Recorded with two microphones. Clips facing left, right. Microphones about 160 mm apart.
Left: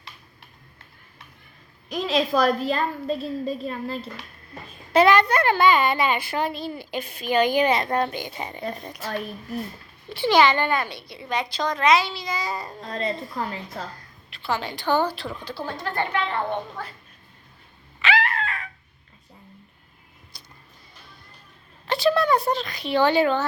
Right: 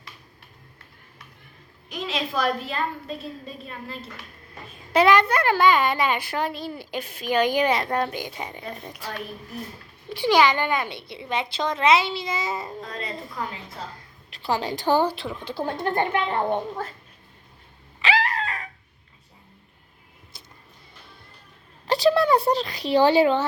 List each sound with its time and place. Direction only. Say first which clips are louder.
1.9 s a woman's voice: left 6 dB; 35° left (ahead or behind)
4.9 s a child's voice: left 1 dB; 10° right (ahead or behind)
5.5 s a child's voice: right 1 dB; 5° left (ahead or behind)
6.5 s a child's voice: left 1 dB; 10° right (ahead or behind)
10.1 s speech: left 1 dB; 10° right (ahead or behind)
14.4 s a woman's voice: right 2 dB; 35° right (ahead or behind)
15.1 s speech: right 1 dB; 20° right (ahead or behind)
15.5 s speech: right 8 dB; 50° right (ahead or behind)
15.9 s a child's voice: right 2 dB; 15° right (ahead or behind)
18.0 s dog: even; 35° right (ahead or behind)
20.3 s vehicle: right 2 dB; 25° right (ahead or behind)
21.8 s a sound: right 2 dB; 35° right (ahead or behind)